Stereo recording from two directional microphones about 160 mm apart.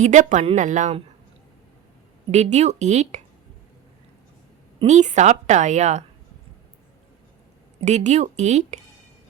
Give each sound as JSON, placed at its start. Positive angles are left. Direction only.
{"t": 0.0, "sound": "a woman's voice", "side_deg": -50}
{"t": 2.3, "sound": "a woman's voice", "side_deg": -45}
{"t": 4.8, "sound": "a woman's voice", "side_deg": -45}
{"t": 7.8, "sound": "a woman's voice", "side_deg": -45}